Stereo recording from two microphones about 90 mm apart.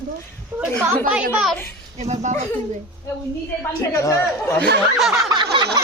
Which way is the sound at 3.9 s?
35° left (ahead or behind).